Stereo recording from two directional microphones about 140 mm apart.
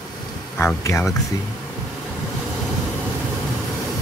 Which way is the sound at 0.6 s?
20° left (ahead or behind).